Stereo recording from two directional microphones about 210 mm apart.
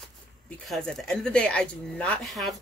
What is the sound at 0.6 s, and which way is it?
Speech, centre (ahead or behind).